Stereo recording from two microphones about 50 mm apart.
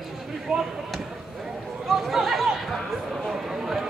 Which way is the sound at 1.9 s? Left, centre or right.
Centre.